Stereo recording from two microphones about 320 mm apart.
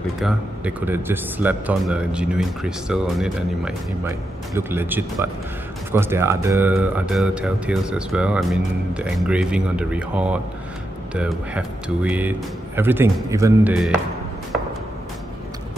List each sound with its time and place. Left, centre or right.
0.2 s speech: centre